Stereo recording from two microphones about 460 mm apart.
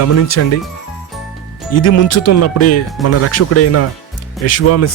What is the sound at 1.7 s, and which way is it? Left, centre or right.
Speech, left.